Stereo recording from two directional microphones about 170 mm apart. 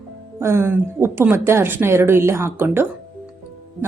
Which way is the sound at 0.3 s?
15° right (ahead or behind).